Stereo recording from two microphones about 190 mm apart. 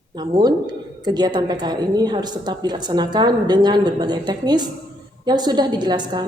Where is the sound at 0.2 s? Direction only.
25° right (ahead or behind).